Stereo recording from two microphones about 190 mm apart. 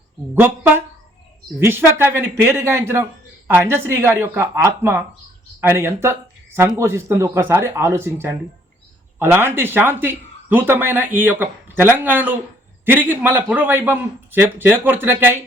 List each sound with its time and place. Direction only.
1.5 s a man's voice: 10° right (ahead or behind)